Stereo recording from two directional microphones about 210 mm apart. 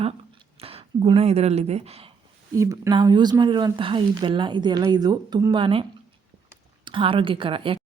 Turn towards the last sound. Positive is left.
turn(degrees=-25)  # may be behind; listen again after turning